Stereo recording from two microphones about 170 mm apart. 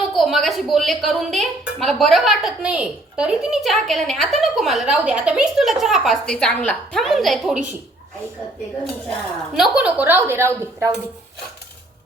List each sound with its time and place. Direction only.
0.2 s a woman's voice: centre (ahead or behind)
9.6 s a woman's voice: 5° right (ahead or behind)